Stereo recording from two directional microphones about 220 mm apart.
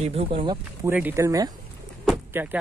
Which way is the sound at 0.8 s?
10° right (ahead or behind).